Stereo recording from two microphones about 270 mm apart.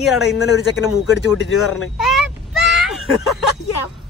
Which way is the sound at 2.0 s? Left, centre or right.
Centre.